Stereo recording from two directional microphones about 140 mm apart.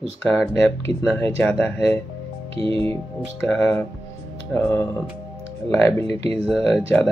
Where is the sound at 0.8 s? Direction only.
15° left (ahead or behind).